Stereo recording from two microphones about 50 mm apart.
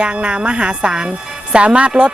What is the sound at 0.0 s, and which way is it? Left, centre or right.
A woman's voice, right.